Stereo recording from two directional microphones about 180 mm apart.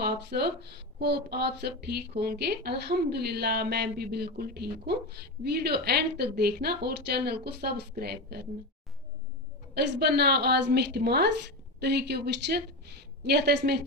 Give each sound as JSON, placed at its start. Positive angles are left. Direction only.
{"t": 0.0, "sound": "speech", "side_deg": -65}
{"t": 9.8, "sound": "speech", "side_deg": -60}